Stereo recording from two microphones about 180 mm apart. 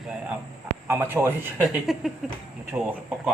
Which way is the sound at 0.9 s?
10° right (ahead or behind).